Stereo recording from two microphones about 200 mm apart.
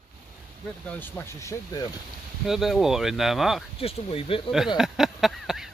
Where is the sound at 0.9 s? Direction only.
10° left (ahead or behind).